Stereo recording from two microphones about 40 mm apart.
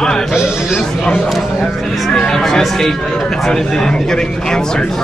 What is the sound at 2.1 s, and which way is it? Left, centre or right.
Speech, centre.